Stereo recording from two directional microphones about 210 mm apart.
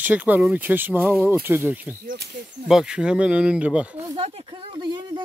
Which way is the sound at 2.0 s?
40° right (ahead or behind).